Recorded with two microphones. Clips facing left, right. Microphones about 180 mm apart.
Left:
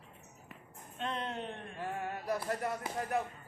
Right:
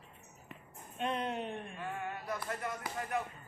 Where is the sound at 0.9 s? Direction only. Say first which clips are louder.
Right 2 dB; 10° right (ahead or behind).